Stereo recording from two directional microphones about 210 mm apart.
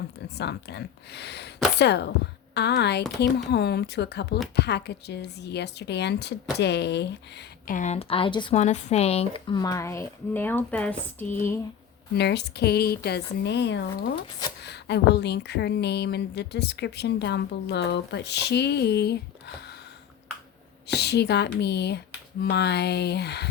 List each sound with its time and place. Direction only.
0.3 s speech: 55° left (ahead or behind)
7.7 s speech: 35° left (ahead or behind)
8.5 s speech: 35° left (ahead or behind); by 11.6 s 10° left (ahead or behind)
12.1 s speech: 55° left (ahead or behind)
20.8 s speech: 50° left (ahead or behind)